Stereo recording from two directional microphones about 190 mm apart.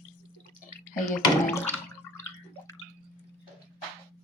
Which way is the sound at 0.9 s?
10° left (ahead or behind).